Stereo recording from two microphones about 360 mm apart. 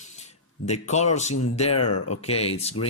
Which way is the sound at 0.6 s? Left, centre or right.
Centre.